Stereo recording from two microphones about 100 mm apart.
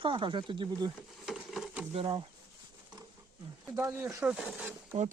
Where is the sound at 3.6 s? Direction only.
20° right (ahead or behind).